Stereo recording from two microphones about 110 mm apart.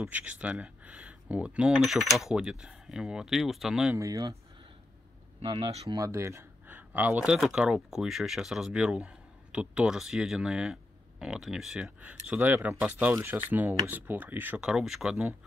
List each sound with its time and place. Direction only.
0.0 s speech: 10° right (ahead or behind)
3.9 s speech: 30° right (ahead or behind)
5.4 s speech: 45° right (ahead or behind)
5.9 s speech: 25° right (ahead or behind)
14.6 s speech: 5° right (ahead or behind)